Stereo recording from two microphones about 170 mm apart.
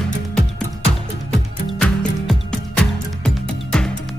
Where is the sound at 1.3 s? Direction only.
5° left (ahead or behind).